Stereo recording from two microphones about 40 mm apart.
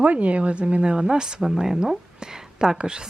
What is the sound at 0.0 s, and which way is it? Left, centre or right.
Speech, right.